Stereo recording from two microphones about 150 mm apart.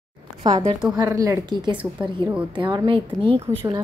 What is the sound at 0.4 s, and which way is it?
A woman's voice, 25° right (ahead or behind).